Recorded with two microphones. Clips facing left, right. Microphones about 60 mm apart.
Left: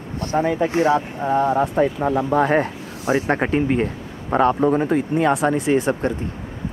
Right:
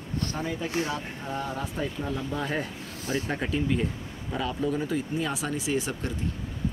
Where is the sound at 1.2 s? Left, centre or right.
Left.